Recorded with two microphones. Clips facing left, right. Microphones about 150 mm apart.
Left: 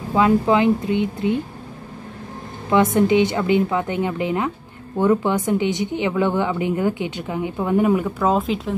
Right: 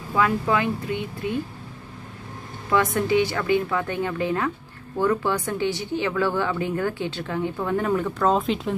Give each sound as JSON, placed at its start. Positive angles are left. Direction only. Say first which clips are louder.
{"t": 0.1, "sound": "speech", "louder": "left 6 dB", "side_deg": 20}
{"t": 2.7, "sound": "speech", "louder": "left 5 dB", "side_deg": 20}